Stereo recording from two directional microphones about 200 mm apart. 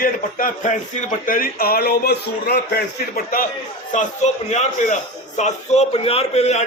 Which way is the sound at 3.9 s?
35° left (ahead or behind).